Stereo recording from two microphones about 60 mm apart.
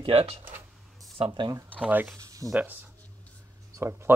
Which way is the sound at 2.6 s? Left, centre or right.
Right.